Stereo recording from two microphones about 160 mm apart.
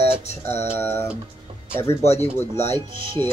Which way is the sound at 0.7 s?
15° left (ahead or behind).